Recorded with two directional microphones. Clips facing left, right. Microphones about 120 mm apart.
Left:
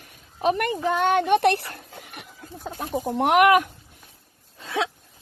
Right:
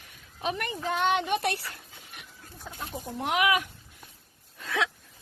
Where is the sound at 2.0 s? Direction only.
65° left (ahead or behind).